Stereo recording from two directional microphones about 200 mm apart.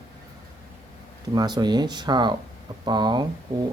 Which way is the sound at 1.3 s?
20° right (ahead or behind).